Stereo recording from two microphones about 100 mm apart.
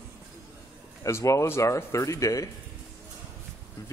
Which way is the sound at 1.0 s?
30° left (ahead or behind).